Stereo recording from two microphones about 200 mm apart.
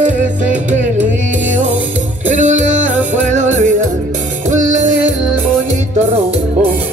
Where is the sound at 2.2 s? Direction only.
40° right (ahead or behind).